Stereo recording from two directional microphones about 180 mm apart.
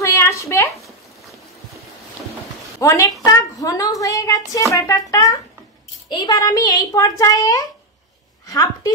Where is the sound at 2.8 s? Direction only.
15° left (ahead or behind).